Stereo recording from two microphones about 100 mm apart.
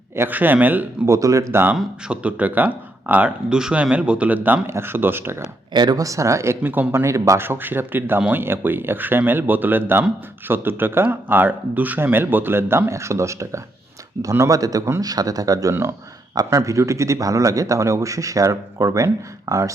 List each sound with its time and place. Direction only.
0.2 s speech: 20° right (ahead or behind)
1.0 s speech: 30° right (ahead or behind)
1.7 s speech: 5° right (ahead or behind); by 5.4 s 25° right (ahead or behind)
5.7 s a man's voice: 45° right (ahead or behind)
15.7 s speech: 25° right (ahead or behind)
16.3 s a man's voice: 40° right (ahead or behind)